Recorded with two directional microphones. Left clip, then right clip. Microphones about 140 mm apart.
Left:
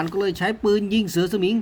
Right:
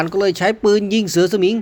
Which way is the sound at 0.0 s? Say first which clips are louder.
Right 7 dB; 40° right (ahead or behind).